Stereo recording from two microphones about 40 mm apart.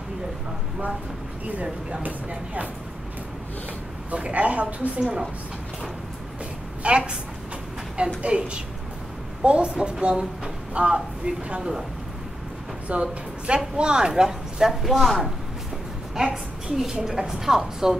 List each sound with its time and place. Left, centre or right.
1.6 s speech: right
4.1 s speech: right
6.8 s speech: right
8.2 s speech: right
12.8 s speech: right
14.7 s speech: centre
16.2 s a woman's voice: centre